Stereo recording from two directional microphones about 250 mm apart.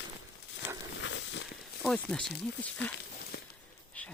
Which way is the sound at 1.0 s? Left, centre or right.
Left.